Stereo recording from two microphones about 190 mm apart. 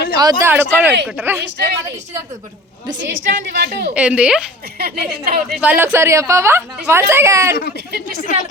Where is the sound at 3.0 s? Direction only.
70° right (ahead or behind).